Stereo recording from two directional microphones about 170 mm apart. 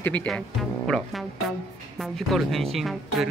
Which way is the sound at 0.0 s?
10° left (ahead or behind).